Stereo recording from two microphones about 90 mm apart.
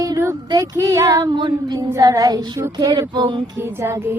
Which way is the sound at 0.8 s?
35° right (ahead or behind).